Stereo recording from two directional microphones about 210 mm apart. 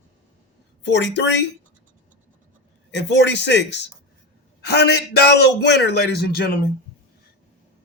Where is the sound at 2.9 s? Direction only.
55° left (ahead or behind).